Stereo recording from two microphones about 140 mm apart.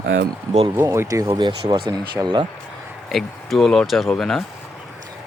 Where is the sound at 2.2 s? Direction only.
10° right (ahead or behind).